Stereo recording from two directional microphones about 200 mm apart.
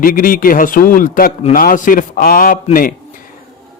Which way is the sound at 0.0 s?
45° left (ahead or behind).